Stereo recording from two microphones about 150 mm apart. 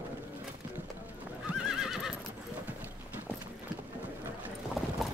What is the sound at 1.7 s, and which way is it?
Neigh, 5° right (ahead or behind).